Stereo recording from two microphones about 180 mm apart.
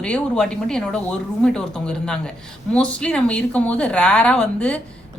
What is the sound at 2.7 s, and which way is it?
Speech, 5° left (ahead or behind).